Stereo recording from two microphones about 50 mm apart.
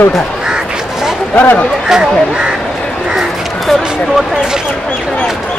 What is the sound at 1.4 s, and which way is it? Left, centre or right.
Speech, left.